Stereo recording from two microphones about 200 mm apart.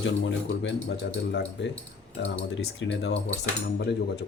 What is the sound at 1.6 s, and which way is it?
Speech, 60° left (ahead or behind).